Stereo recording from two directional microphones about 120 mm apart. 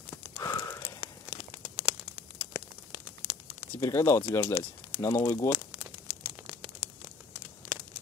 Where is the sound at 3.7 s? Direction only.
30° left (ahead or behind).